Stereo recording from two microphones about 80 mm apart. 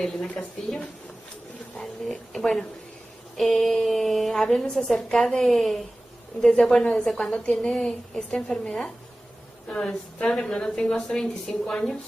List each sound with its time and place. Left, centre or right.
0.0 s a woman's voice: centre